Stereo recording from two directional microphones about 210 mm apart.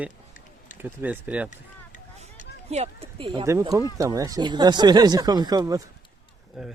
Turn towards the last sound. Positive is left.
turn(degrees=-5)  # may be behind; listen again after turning